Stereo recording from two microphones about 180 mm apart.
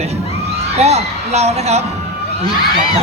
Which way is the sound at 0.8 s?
35° right (ahead or behind).